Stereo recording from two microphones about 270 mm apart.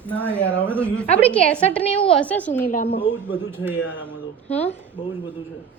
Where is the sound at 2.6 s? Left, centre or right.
Left.